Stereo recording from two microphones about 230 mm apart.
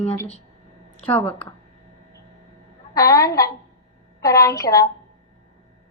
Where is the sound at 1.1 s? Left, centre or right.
Centre.